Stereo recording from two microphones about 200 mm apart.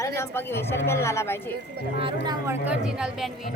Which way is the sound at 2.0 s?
25° right (ahead or behind).